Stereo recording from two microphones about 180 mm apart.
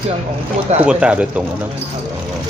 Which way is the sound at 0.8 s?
5° right (ahead or behind).